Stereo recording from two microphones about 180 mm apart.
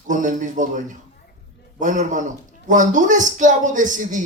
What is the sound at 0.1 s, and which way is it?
Speech, 45° right (ahead or behind).